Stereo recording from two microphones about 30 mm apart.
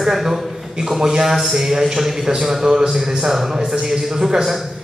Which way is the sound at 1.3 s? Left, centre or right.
Centre.